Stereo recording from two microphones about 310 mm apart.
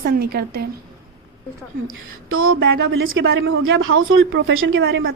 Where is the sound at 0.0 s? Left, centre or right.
Right.